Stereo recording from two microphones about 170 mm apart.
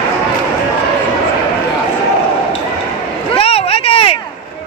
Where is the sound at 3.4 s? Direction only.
35° left (ahead or behind).